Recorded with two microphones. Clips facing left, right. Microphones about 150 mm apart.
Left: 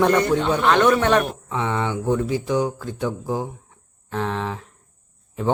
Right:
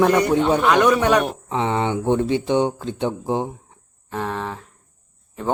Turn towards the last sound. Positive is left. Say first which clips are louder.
# left 2 dB
turn(degrees=0)  # may be behind; listen again after turning